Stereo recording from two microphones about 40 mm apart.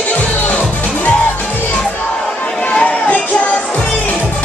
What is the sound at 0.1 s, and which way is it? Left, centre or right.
Music, left.